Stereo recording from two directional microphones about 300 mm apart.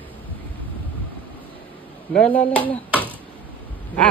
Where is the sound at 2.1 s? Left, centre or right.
Centre.